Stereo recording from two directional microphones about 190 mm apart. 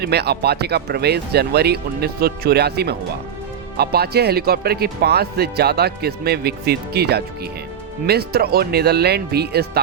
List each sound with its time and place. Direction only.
0.0 s speech: 60° right (ahead or behind)